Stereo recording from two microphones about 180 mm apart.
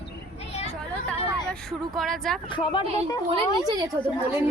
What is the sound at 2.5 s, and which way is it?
Speech, 25° left (ahead or behind).